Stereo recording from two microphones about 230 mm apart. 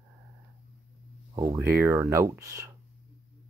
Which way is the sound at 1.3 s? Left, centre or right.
Centre.